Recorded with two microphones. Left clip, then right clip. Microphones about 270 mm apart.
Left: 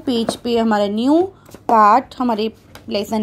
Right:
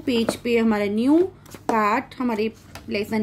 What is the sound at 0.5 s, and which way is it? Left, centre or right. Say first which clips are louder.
A woman's voice: left 6 dB; centre.